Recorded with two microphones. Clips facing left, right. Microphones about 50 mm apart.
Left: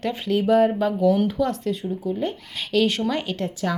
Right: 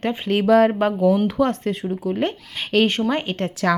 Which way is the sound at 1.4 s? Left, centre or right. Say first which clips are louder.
Right 3 dB; right.